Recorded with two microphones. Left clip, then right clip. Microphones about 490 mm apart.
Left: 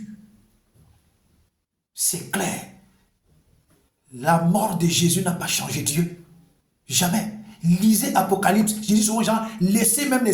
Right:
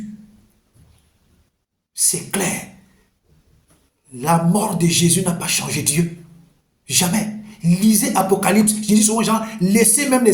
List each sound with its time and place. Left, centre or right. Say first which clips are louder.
2.0 s speech: right 4 dB; left
4.1 s speech: right 2 dB; left